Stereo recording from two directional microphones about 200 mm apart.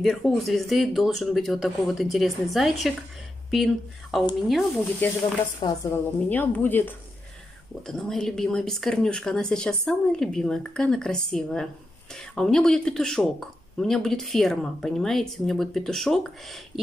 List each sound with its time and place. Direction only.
0.0 s speech: centre (ahead or behind)
5.6 s a woman's voice: 20° left (ahead or behind)
6.2 s speech: 10° left (ahead or behind)